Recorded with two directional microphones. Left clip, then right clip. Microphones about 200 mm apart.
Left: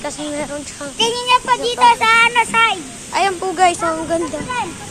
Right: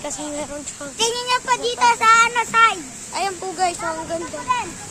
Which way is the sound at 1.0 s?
35° right (ahead or behind).